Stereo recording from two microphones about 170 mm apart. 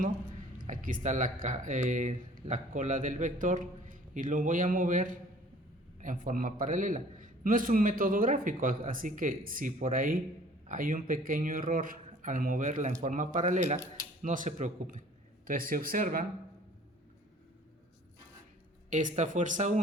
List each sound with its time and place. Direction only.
0.6 s speech: 50° right (ahead or behind)
18.9 s speech: 45° right (ahead or behind)